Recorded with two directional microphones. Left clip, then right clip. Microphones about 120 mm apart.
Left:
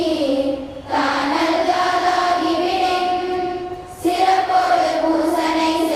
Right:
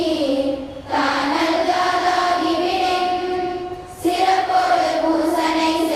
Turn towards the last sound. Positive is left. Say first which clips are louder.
# even
turn(degrees=0)  # may be behind; listen again after turning